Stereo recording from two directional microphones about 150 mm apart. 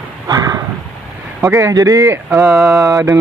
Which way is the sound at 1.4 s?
20° right (ahead or behind).